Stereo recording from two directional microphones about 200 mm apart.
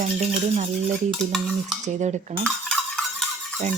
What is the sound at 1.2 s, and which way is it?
Stir, centre (ahead or behind).